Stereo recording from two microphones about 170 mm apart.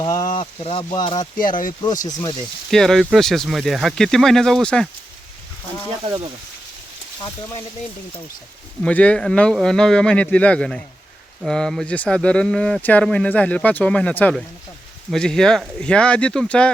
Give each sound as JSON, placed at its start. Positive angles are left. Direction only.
{"t": 0.0, "sound": "a sound", "side_deg": 20}
{"t": 0.3, "sound": "speech", "side_deg": 35}
{"t": 0.9, "sound": "speech", "side_deg": 25}
{"t": 1.4, "sound": "speech", "side_deg": 55}
{"t": 2.6, "sound": "speech", "side_deg": 0}
{"t": 6.1, "sound": "speech", "side_deg": -25}
{"t": 8.8, "sound": "speech", "side_deg": 5}